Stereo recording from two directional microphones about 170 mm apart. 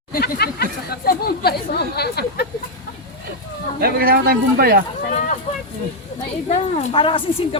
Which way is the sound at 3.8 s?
60° right (ahead or behind).